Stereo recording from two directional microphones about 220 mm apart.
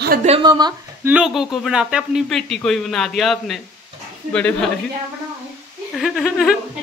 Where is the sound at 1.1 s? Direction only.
Centre (ahead or behind).